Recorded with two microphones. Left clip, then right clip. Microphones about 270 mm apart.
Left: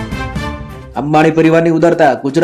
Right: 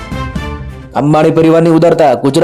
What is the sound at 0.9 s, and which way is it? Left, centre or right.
A man's voice, right.